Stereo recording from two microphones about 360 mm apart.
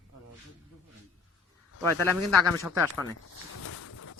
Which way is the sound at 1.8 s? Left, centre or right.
Centre.